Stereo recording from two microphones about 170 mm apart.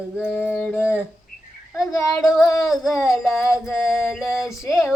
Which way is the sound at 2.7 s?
Centre (ahead or behind).